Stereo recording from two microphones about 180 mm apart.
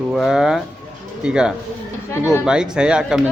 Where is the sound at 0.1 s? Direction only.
Centre (ahead or behind).